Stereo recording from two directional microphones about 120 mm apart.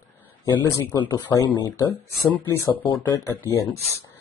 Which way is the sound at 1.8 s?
15° left (ahead or behind).